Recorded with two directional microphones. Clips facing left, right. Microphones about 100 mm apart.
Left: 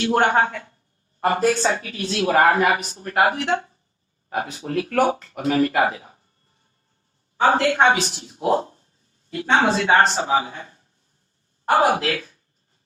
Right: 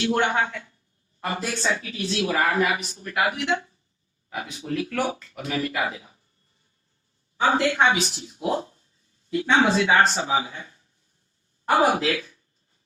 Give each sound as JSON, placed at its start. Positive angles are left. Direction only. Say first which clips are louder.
{"t": 0.0, "sound": "a woman's voice", "louder": "left 4 dB", "side_deg": 50}
{"t": 7.3, "sound": "a woman's voice", "louder": "left 3 dB", "side_deg": 45}